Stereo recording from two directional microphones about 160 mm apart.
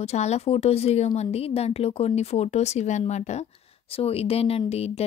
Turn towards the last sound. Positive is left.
turn(degrees=40)  # may be behind; listen again after turning